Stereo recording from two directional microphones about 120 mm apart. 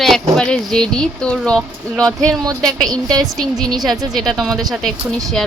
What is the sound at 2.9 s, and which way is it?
Speech, 35° right (ahead or behind).